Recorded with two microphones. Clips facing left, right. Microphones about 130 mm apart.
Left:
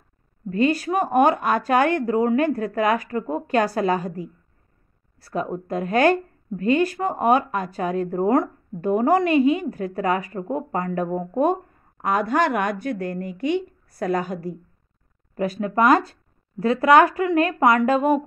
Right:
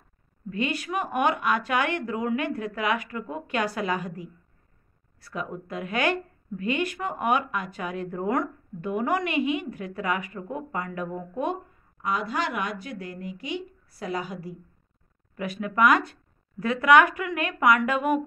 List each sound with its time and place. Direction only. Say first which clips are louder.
0.5 s speech: left 8 dB; 40° left (ahead or behind)